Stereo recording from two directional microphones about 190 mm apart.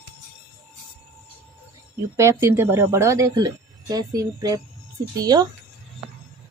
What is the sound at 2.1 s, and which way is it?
Speech, 15° right (ahead or behind).